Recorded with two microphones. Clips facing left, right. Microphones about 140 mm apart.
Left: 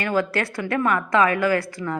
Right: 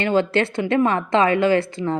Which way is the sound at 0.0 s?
25° right (ahead or behind).